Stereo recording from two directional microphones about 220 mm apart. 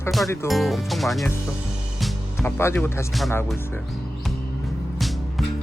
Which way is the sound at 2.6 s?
10° left (ahead or behind).